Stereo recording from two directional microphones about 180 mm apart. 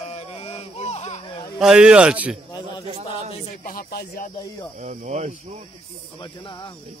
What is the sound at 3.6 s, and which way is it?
Speech, 55° left (ahead or behind).